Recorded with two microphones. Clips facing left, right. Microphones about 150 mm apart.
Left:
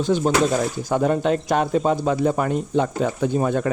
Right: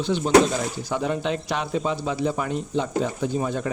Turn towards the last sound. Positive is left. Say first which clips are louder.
# left 5 dB
turn(degrees=55)  # may be behind; listen again after turning